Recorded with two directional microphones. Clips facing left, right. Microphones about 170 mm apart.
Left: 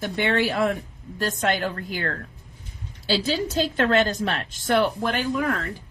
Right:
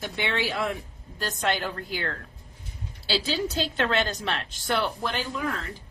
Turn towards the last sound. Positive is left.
turn(degrees=55)  # may be behind; listen again after turning